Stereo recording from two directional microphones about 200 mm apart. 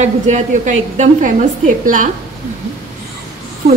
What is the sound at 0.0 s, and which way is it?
A woman's voice, 35° right (ahead or behind).